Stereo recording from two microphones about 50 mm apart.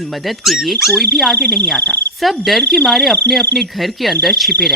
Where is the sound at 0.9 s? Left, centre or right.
Centre.